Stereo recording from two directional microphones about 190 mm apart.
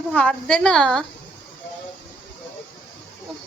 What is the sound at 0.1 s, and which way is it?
Child singing, 5° left (ahead or behind).